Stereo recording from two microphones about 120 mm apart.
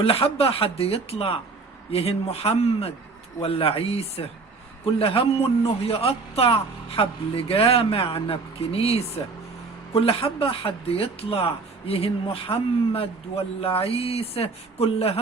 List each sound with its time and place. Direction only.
0.0 s a man's voice: 55° left (ahead or behind)